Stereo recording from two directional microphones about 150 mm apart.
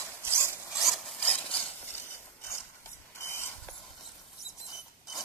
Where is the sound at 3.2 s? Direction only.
15° left (ahead or behind).